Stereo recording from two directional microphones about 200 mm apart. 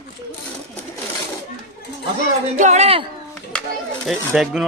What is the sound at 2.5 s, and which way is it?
Speech, 35° right (ahead or behind).